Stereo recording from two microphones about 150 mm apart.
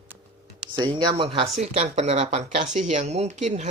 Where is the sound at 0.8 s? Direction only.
30° right (ahead or behind).